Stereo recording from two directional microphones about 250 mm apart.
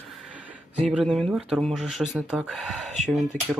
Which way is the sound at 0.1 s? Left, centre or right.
Centre.